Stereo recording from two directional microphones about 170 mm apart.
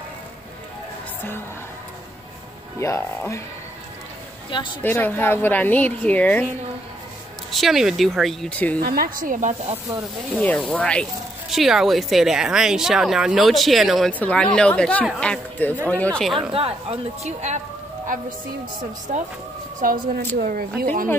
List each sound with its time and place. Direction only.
2.8 s speech: 15° left (ahead or behind)
4.5 s speech: 30° left (ahead or behind)
4.8 s speech: 10° left (ahead or behind)
7.5 s speech: centre (ahead or behind)
8.7 s speech: 60° right (ahead or behind)
10.4 s speech: 10° left (ahead or behind)
17.2 s speech: 40° right (ahead or behind)
19.1 s speech: 45° right (ahead or behind)